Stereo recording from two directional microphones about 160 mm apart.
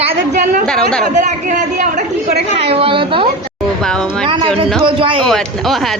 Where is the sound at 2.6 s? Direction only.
35° right (ahead or behind).